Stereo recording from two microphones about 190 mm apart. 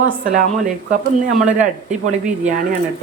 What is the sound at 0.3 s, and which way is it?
Speech, 40° right (ahead or behind).